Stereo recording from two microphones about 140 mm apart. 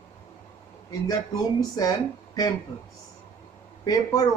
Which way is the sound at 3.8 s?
25° left (ahead or behind).